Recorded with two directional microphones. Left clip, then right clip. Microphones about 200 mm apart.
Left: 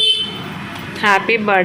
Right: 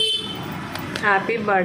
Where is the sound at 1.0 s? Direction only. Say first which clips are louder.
Left 6 dB; 20° left (ahead or behind).